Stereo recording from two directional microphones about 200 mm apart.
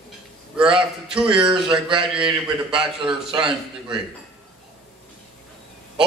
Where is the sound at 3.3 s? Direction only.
5° right (ahead or behind).